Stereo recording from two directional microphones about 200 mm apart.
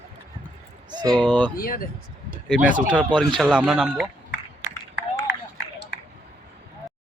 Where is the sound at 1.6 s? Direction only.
45° left (ahead or behind).